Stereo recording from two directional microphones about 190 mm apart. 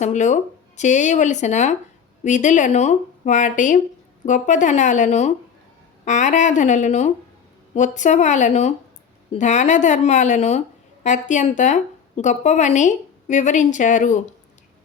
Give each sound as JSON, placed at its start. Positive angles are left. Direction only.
{"t": 0.0, "sound": "speech", "side_deg": 40}